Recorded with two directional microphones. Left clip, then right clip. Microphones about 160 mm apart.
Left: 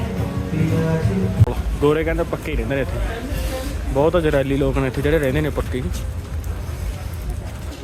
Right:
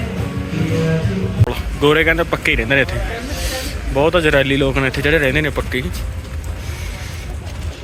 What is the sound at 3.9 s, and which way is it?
Speech, 10° left (ahead or behind).